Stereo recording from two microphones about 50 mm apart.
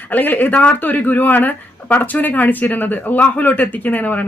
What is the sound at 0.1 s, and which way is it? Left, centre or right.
Speech, left.